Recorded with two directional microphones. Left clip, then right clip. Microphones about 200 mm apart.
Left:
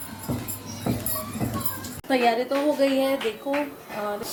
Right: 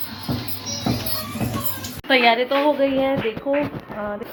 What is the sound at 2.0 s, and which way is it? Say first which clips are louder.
A woman's voice: right 6 dB; 20° left (ahead or behind).